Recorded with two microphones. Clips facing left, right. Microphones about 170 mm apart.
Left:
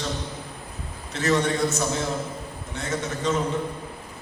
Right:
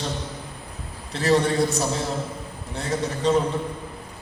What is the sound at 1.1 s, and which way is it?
A man's voice, 35° right (ahead or behind).